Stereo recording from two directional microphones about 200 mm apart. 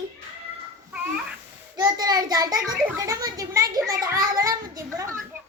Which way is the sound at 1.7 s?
20° right (ahead or behind).